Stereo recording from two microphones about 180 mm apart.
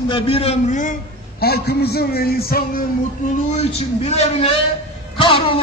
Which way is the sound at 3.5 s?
35° left (ahead or behind).